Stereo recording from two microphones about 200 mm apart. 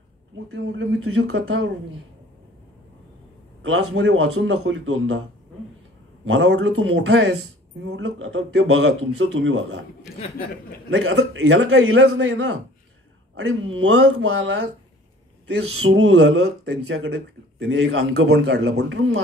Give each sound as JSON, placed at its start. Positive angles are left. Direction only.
{"t": 0.5, "sound": "a man's voice", "side_deg": -85}
{"t": 3.6, "sound": "a man's voice", "side_deg": -85}
{"t": 6.2, "sound": "speech", "side_deg": -90}
{"t": 10.9, "sound": "speech", "side_deg": -85}
{"t": 15.8, "sound": "speech", "side_deg": -90}
{"t": 18.8, "sound": "speech", "side_deg": -65}